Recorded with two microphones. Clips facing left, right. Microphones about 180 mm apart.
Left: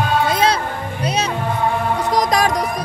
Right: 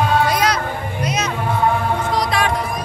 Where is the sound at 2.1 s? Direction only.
40° left (ahead or behind).